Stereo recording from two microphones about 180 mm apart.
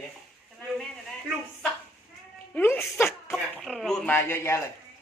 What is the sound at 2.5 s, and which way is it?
Speech, 10° left (ahead or behind).